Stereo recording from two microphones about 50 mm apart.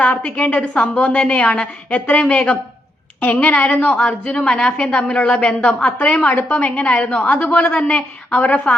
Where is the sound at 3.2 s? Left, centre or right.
Left.